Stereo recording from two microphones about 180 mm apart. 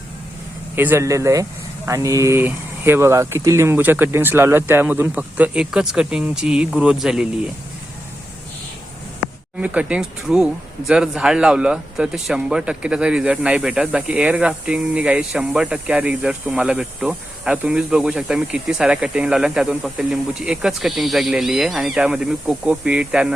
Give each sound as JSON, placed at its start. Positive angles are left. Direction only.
{"t": 0.8, "sound": "speech", "side_deg": -15}
{"t": 9.6, "sound": "speech", "side_deg": -5}